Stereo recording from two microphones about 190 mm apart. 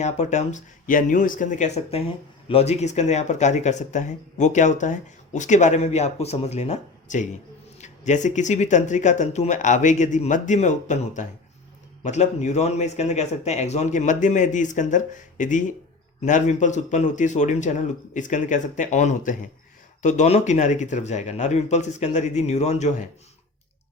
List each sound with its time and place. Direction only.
0.0 s speech: 40° left (ahead or behind)